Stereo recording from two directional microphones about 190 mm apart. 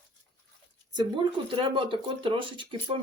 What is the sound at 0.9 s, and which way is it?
Speech, 25° right (ahead or behind).